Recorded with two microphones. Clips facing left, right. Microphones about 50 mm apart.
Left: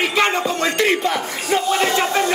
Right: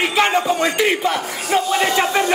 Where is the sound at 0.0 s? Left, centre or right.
Centre.